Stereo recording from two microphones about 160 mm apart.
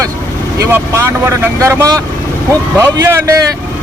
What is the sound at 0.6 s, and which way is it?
Speech, 15° right (ahead or behind).